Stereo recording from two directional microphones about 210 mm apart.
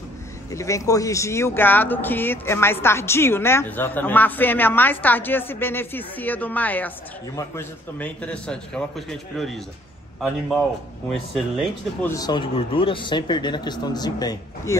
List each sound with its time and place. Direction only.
0.5 s a man's voice: 15° left (ahead or behind)
11.1 s a man's voice: centre (ahead or behind)
12.2 s speech: 20° left (ahead or behind)